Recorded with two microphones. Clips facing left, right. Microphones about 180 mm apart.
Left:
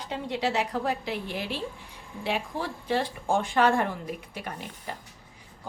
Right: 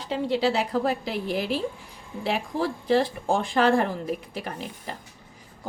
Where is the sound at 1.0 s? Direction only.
40° right (ahead or behind).